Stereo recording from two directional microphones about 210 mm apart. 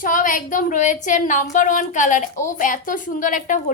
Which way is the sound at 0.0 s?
40° left (ahead or behind).